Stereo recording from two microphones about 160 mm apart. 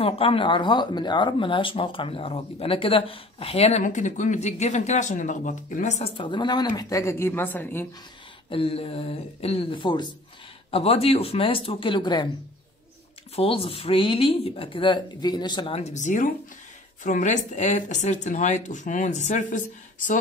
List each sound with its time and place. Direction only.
0.0 s speech: 35° left (ahead or behind)
3.8 s speech: 50° left (ahead or behind)
6.1 s speech: 30° left (ahead or behind); by 7.8 s 10° left (ahead or behind)
8.5 s speech: 35° left (ahead or behind)
13.4 s speech: 35° left (ahead or behind); by 20.2 s 55° left (ahead or behind)